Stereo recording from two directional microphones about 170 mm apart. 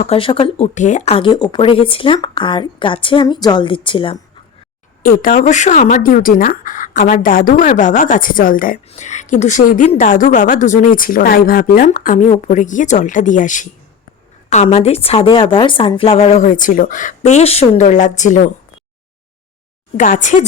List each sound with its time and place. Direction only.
0.0 s speech: 35° left (ahead or behind)
5.0 s speech: 50° left (ahead or behind)
8.9 s speech: 45° left (ahead or behind)
20.0 s speech: 50° left (ahead or behind)